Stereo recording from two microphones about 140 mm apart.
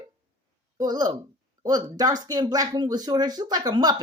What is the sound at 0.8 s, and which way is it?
Speech, 30° right (ahead or behind).